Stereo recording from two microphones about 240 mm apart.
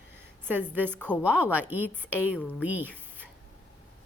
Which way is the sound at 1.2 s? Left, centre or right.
Centre.